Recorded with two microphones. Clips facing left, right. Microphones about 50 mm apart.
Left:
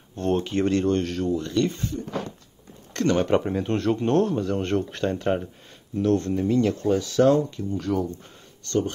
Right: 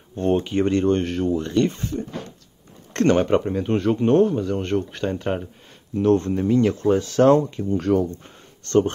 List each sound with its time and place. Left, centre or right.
0.1 s a sound: right
0.4 s speech: centre
2.9 s a sound: right
3.2 s speech: centre
3.7 s speech: centre
5.9 s speech: right